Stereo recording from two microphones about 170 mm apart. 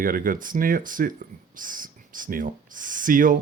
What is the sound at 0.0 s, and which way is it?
Speech, 55° right (ahead or behind).